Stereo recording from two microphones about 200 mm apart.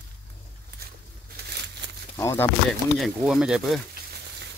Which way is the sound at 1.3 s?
55° right (ahead or behind).